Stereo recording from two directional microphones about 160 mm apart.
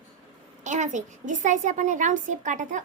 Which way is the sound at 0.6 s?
50° right (ahead or behind).